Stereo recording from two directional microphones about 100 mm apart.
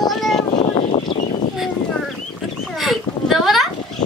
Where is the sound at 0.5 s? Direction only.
60° left (ahead or behind).